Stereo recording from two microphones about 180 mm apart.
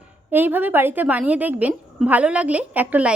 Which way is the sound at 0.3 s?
10° right (ahead or behind).